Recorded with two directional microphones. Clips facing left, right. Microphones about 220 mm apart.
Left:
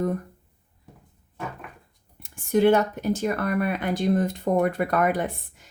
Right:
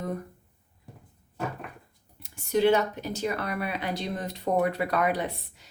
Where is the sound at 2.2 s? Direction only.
50° left (ahead or behind).